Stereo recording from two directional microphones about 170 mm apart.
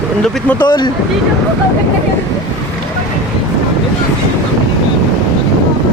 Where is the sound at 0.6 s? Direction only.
25° left (ahead or behind).